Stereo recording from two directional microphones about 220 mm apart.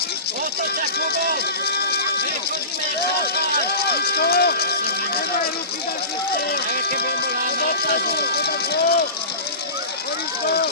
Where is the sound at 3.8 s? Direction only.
45° left (ahead or behind).